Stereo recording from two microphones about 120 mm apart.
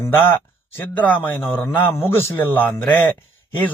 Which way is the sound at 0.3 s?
20° left (ahead or behind).